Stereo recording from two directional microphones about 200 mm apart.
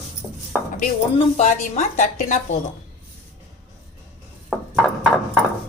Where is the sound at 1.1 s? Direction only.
35° left (ahead or behind).